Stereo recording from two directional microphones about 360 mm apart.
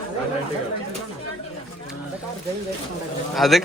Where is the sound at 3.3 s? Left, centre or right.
Centre.